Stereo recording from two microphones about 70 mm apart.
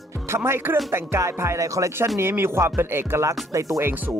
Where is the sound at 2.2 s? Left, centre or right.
Right.